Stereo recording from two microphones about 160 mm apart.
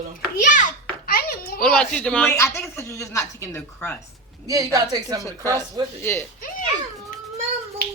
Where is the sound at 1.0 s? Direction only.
70° left (ahead or behind).